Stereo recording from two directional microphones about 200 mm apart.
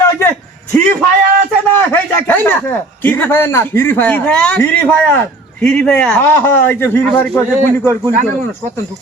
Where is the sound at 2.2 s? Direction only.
10° left (ahead or behind).